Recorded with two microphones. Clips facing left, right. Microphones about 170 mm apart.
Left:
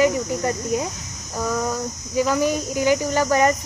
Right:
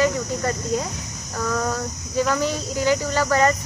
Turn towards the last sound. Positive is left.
turn(degrees=15)  # may be behind; listen again after turning